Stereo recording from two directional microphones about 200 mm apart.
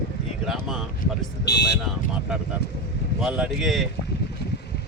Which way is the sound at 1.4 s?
60° left (ahead or behind).